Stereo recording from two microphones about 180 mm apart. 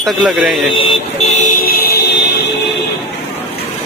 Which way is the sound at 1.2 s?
40° left (ahead or behind).